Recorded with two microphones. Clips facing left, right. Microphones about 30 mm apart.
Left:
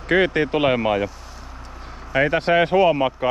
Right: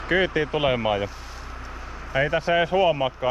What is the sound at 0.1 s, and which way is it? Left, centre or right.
Speech, left.